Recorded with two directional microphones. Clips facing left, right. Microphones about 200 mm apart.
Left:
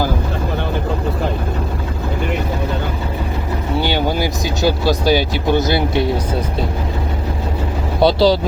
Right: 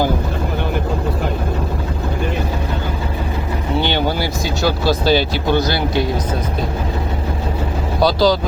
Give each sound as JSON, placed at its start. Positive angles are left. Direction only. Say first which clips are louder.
{"t": 3.8, "sound": "vehicle", "louder": "left 1 dB", "side_deg": 10}
{"t": 8.0, "sound": "speech", "louder": "left 2 dB", "side_deg": 30}